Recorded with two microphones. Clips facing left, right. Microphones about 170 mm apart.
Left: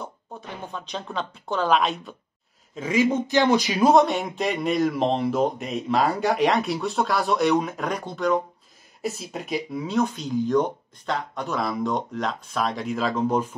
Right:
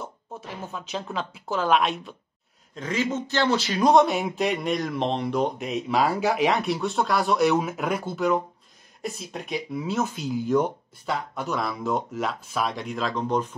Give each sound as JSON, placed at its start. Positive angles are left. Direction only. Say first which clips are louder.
{"t": 0.0, "sound": "a man's voice", "louder": "even", "side_deg": 0}